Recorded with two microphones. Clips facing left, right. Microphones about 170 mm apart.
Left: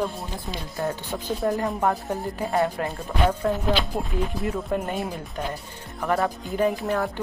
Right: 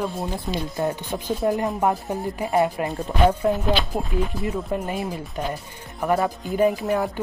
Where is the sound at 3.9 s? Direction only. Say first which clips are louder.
Right 2 dB; centre (ahead or behind).